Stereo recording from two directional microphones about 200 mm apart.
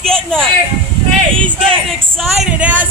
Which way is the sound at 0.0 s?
5° left (ahead or behind).